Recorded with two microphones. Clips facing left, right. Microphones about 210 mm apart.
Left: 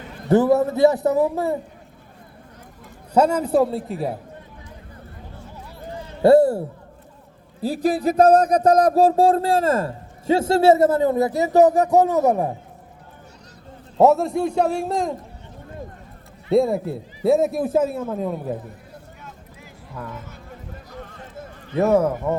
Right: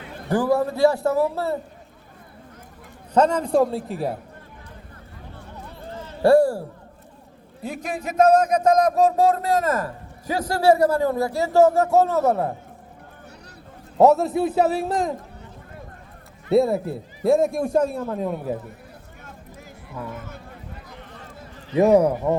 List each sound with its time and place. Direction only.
0.3 s speech: 25° left (ahead or behind)
3.2 s a man's voice: 10° left (ahead or behind)
5.9 s a sound: 15° left (ahead or behind)
7.6 s speech: 35° left (ahead or behind); by 12.5 s 15° left (ahead or behind)
14.0 s a man's voice: centre (ahead or behind)
16.5 s a man's voice: centre (ahead or behind)
21.8 s speech: 15° right (ahead or behind)